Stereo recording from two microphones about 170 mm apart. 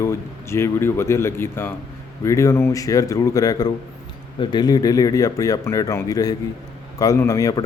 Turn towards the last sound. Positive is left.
turn(degrees=20)  # may be behind; listen again after turning